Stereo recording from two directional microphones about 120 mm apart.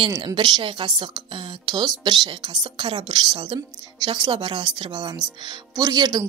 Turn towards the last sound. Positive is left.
turn(degrees=-35)  # may be behind; listen again after turning